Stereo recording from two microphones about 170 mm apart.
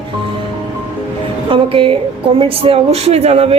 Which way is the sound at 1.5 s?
30° right (ahead or behind).